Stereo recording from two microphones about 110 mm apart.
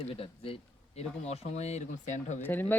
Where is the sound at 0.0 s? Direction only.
60° left (ahead or behind); by 2.4 s 90° left.